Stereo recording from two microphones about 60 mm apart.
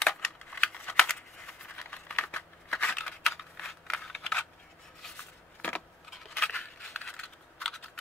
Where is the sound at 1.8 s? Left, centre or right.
Left.